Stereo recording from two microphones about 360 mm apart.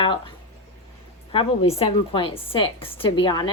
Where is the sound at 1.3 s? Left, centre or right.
Centre.